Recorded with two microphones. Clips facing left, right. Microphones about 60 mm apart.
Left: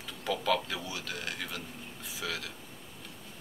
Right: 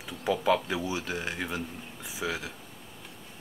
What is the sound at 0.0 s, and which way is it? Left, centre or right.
Speech, centre.